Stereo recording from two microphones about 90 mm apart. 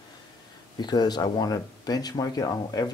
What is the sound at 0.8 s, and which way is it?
Speech, 55° left (ahead or behind).